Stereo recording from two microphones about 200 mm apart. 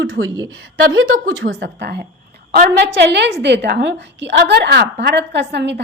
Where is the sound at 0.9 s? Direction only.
75° right (ahead or behind).